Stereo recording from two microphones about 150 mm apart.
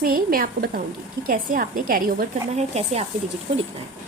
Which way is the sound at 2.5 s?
45° right (ahead or behind).